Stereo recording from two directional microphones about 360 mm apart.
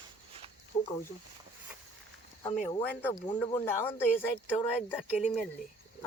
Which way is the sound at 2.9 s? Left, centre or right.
Centre.